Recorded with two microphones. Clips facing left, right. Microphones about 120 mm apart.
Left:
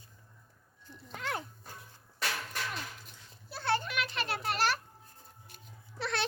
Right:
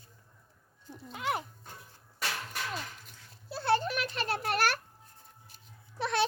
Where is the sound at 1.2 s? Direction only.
5° right (ahead or behind).